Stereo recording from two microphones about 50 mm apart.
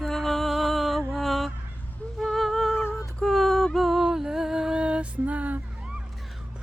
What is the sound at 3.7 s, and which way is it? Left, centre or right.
Music, centre.